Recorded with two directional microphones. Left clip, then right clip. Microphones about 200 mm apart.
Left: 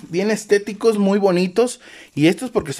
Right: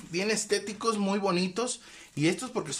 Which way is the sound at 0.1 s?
40° left (ahead or behind).